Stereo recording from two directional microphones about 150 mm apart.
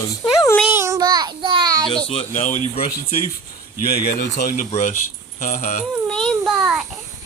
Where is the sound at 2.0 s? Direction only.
40° left (ahead or behind).